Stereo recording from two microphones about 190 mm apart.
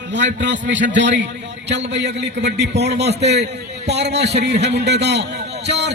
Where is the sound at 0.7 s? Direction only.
70° right (ahead or behind).